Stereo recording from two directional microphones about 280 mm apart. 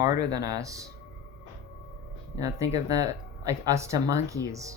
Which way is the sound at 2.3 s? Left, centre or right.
Centre.